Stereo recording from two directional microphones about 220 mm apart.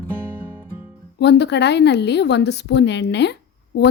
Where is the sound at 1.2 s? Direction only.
50° left (ahead or behind).